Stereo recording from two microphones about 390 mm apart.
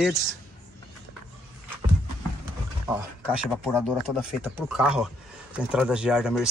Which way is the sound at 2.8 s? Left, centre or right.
Centre.